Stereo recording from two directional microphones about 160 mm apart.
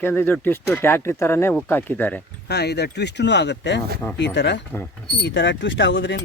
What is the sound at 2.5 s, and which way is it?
Speech, 90° left.